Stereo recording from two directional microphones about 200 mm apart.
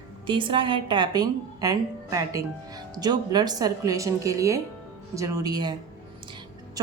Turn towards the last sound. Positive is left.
turn(degrees=-20)  # may be behind; listen again after turning